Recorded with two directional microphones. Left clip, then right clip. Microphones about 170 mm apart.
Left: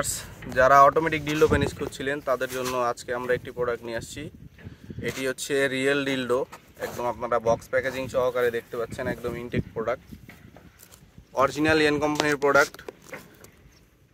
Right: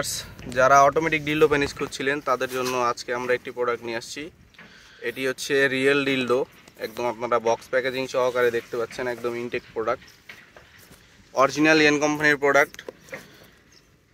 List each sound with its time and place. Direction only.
0.0 s speech: 15° right (ahead or behind); by 9.9 s 35° right (ahead or behind)
11.3 s speech: 20° right (ahead or behind); by 12.6 s 5° right (ahead or behind)